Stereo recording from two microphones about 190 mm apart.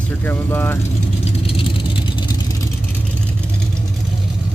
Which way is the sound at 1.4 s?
30° left (ahead or behind).